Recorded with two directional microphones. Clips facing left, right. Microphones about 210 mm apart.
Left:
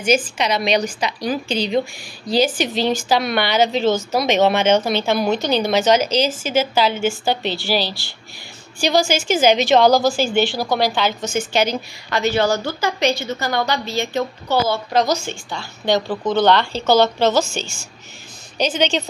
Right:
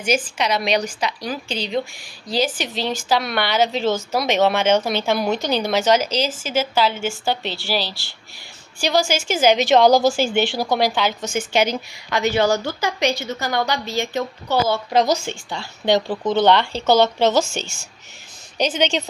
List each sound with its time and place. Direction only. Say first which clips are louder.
0.0 s a woman's voice: left 3 dB; 5° right (ahead or behind); by 10.9 s 25° right (ahead or behind)
11.0 s a woman's voice: left 1 dB; 10° right (ahead or behind)
15.6 s a woman's voice: right 1 dB; 30° right (ahead or behind)